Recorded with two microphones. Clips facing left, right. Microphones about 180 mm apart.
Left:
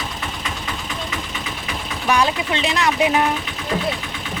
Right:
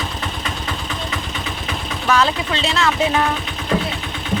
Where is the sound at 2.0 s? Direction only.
15° left (ahead or behind).